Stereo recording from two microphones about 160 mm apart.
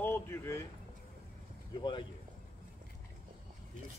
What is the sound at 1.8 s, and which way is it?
Speech, 30° left (ahead or behind).